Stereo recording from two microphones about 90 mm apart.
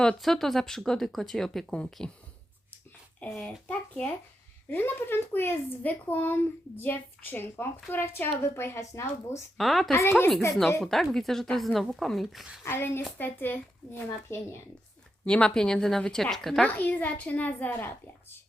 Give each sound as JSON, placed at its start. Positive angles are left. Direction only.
{"t": 0.0, "sound": "speech", "side_deg": 5}
{"t": 3.3, "sound": "a child's voice", "side_deg": 10}
{"t": 4.7, "sound": "speech", "side_deg": 25}
{"t": 9.6, "sound": "speech", "side_deg": 0}
{"t": 9.9, "sound": "speech", "side_deg": 25}
{"t": 10.8, "sound": "speech", "side_deg": 5}
{"t": 12.6, "sound": "speech", "side_deg": 25}
{"t": 15.2, "sound": "a child's voice", "side_deg": 10}
{"t": 16.6, "sound": "a child's voice", "side_deg": 15}